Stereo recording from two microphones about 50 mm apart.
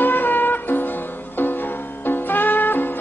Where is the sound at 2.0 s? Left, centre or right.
Left.